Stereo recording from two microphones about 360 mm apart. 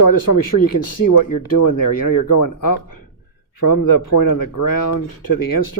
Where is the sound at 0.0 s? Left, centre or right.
Left.